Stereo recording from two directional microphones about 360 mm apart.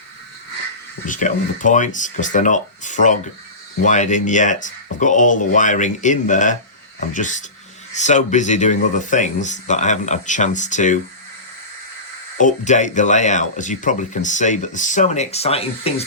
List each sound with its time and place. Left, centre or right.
1.0 s speech: left
12.4 s speech: left